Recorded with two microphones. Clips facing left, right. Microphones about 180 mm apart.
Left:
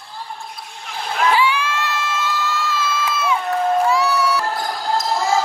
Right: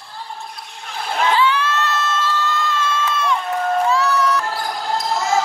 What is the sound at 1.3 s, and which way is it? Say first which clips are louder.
Crowd: right 1 dB; 10° left (ahead or behind).